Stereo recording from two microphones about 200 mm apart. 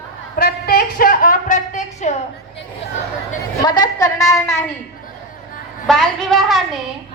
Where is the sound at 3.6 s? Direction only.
20° left (ahead or behind).